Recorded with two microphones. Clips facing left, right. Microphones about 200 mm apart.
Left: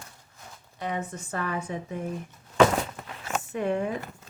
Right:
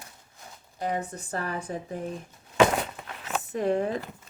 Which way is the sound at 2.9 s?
Centre (ahead or behind).